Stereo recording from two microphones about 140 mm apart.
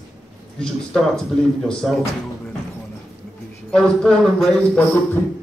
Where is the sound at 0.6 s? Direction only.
5° left (ahead or behind).